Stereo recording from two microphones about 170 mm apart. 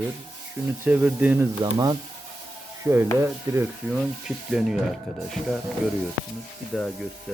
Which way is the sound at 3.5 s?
15° right (ahead or behind).